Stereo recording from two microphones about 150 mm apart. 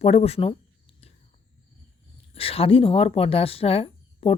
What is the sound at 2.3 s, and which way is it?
Speech, 40° left (ahead or behind).